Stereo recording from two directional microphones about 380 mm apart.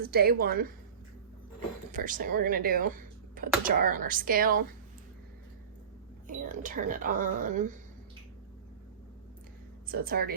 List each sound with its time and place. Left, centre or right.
0.0 s speech: right
1.9 s speech: right
6.2 s speech: right
9.8 s speech: right